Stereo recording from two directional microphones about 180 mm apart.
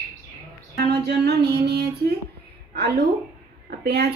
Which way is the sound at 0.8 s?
65° right (ahead or behind).